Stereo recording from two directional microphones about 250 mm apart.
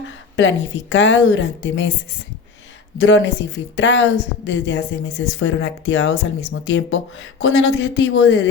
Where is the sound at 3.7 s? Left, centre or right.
Left.